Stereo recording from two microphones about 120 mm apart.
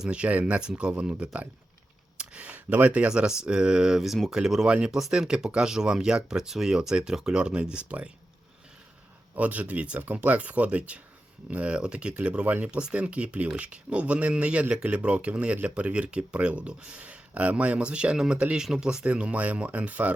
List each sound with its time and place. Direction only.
0.0 s speech: 10° right (ahead or behind)
9.3 s speech: 15° right (ahead or behind)